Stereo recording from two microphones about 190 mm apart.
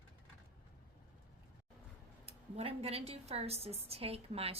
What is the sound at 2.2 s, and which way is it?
A woman's voice, 30° right (ahead or behind).